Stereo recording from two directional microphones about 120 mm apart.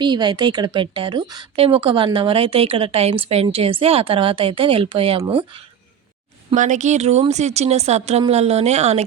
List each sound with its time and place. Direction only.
0.0 s speech: 40° right (ahead or behind)
6.5 s a woman's voice: 90° right; by 9.0 s 65° right (ahead or behind)